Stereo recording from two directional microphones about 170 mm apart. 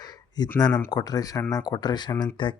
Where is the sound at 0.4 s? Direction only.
25° left (ahead or behind).